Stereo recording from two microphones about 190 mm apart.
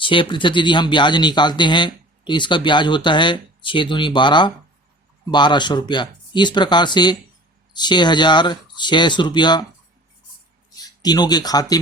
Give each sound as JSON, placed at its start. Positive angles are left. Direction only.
{"t": 0.0, "sound": "speech", "side_deg": 25}
{"t": 10.8, "sound": "speech", "side_deg": 20}